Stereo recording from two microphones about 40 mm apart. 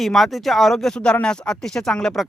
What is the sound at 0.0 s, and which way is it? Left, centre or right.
Speech, centre.